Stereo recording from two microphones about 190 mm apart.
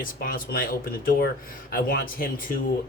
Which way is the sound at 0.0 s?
50° left (ahead or behind).